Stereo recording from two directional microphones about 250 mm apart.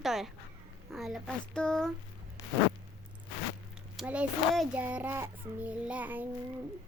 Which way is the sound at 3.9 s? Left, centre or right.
Centre.